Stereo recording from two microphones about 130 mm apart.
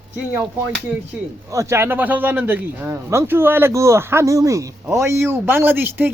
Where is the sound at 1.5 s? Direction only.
20° right (ahead or behind).